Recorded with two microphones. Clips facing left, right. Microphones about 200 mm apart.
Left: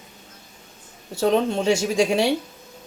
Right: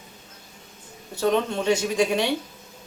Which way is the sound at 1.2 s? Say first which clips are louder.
Left 3 dB; 30° left (ahead or behind).